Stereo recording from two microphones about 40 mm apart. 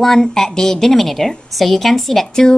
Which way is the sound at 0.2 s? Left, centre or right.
Centre.